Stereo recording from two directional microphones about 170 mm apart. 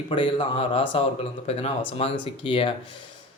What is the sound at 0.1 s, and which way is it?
Speech, 30° left (ahead or behind).